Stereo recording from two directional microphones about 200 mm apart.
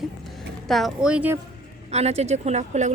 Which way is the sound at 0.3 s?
Centre (ahead or behind).